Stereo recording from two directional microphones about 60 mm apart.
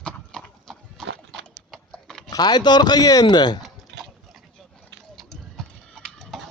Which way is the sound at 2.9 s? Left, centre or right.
Left.